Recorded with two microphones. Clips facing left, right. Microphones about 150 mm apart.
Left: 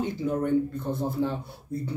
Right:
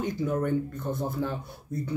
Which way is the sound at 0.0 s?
25° left (ahead or behind).